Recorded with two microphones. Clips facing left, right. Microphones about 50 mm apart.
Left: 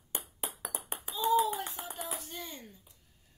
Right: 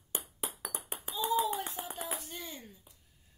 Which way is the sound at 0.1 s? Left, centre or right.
Centre.